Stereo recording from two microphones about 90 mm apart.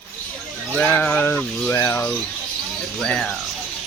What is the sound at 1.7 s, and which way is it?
Speech, 30° left (ahead or behind).